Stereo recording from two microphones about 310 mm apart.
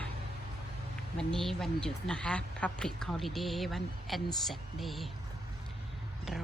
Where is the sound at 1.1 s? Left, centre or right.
Centre.